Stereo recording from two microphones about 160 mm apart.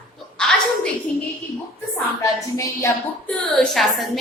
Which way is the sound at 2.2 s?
20° left (ahead or behind).